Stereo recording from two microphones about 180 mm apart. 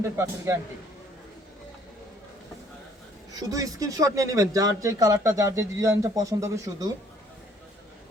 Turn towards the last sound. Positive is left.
turn(degrees=-20)  # may be behind; listen again after turning